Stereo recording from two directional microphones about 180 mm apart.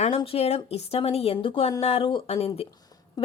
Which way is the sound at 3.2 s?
20° left (ahead or behind).